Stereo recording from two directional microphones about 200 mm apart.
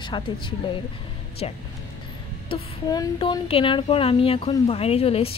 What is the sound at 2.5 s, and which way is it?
Speech, 20° left (ahead or behind).